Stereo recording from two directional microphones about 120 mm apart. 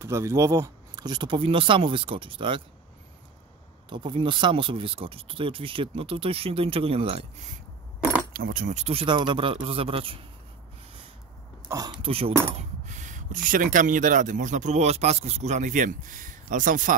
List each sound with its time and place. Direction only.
0.0 s speech: 25° right (ahead or behind)
1.0 s speech: 40° right (ahead or behind)
3.9 s speech: 40° right (ahead or behind)
8.6 s speech: 75° right (ahead or behind)
8.9 s speech: 45° right (ahead or behind)
11.7 s speech: 30° right (ahead or behind)
12.0 s speech: 50° right (ahead or behind)
12.5 s a sound: 90° right
13.7 s speech: 90° right